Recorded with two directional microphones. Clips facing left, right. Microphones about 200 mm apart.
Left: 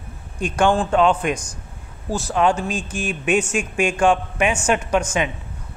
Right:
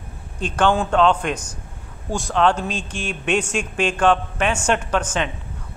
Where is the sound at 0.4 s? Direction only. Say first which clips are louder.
Left 1 dB; 10° left (ahead or behind).